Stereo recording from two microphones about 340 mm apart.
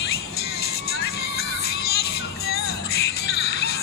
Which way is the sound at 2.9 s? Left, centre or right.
Left.